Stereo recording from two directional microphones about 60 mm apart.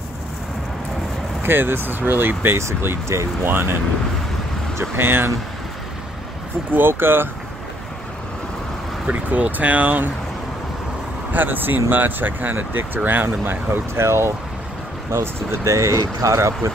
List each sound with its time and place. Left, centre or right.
1.4 s speech: right
6.7 s speech: right
9.0 s speech: right
11.3 s speech: right
16.3 s speech: right